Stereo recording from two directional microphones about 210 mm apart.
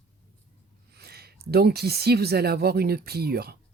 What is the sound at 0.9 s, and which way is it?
Speech, 50° right (ahead or behind).